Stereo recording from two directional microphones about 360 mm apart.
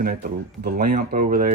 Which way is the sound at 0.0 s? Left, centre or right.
Right.